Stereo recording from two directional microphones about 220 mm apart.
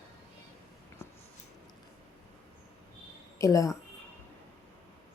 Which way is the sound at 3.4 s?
15° left (ahead or behind).